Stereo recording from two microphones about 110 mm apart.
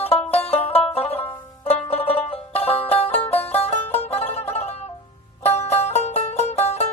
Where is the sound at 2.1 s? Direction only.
60° left (ahead or behind).